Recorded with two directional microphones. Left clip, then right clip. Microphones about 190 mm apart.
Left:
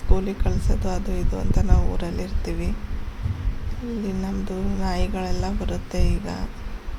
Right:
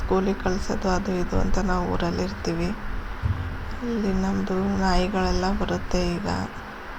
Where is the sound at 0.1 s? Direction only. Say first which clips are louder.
Right 4 dB; 5° right (ahead or behind).